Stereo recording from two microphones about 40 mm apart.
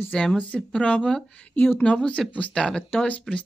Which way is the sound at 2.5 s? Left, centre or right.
Centre.